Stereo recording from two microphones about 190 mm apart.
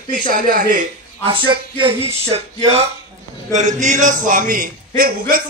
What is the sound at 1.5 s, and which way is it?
Speech, 25° right (ahead or behind).